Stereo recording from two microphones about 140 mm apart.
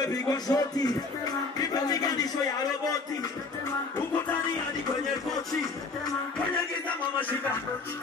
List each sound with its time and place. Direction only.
0.0 s music: 25° left (ahead or behind)